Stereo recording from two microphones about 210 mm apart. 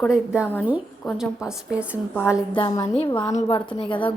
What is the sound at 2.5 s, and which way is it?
A woman's voice, 20° left (ahead or behind).